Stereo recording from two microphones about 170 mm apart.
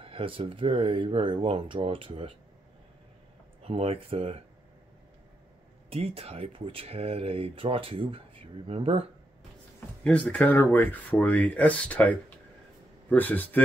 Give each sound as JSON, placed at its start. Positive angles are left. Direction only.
{"t": 0.0, "sound": "speech", "side_deg": -35}
{"t": 3.6, "sound": "speech", "side_deg": -35}
{"t": 5.9, "sound": "speech", "side_deg": -35}
{"t": 10.0, "sound": "speech", "side_deg": 10}